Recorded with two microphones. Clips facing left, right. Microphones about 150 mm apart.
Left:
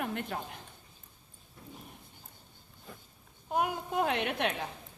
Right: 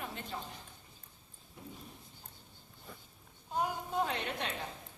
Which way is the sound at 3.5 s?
65° left (ahead or behind).